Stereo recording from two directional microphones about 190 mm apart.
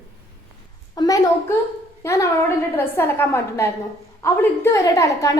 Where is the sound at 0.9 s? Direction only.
20° left (ahead or behind).